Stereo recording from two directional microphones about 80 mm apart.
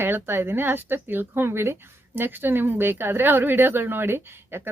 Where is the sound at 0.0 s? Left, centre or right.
Right.